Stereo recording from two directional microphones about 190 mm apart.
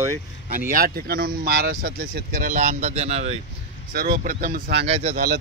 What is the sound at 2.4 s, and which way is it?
Speech, 40° right (ahead or behind).